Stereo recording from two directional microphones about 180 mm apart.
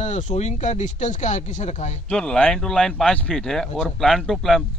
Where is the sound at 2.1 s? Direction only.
5° left (ahead or behind).